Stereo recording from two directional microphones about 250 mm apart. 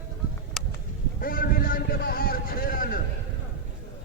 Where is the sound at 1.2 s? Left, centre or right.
Left.